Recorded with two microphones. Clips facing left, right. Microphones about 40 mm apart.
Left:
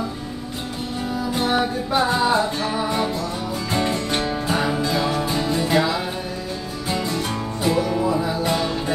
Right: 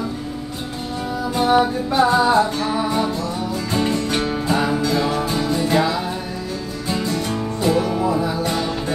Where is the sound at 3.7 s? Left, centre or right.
Left.